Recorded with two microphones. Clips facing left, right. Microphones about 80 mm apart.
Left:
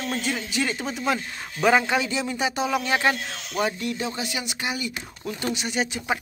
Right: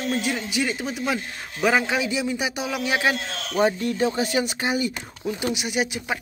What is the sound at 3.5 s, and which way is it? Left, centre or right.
Speech, right.